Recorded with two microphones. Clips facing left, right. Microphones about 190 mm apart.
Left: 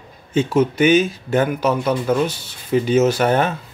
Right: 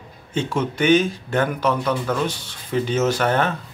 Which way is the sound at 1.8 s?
20° left (ahead or behind).